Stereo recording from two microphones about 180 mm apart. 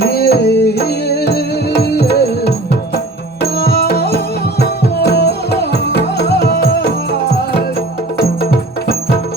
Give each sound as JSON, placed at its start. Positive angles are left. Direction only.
{"t": 0.0, "sound": "music", "side_deg": 60}
{"t": 8.2, "sound": "music", "side_deg": 60}